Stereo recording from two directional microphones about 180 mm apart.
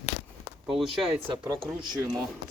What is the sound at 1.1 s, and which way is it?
Speech, 30° right (ahead or behind).